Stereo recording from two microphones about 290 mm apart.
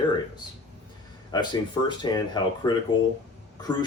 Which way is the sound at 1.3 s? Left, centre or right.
Centre.